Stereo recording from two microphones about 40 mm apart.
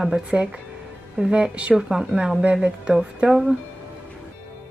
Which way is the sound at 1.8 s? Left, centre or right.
Centre.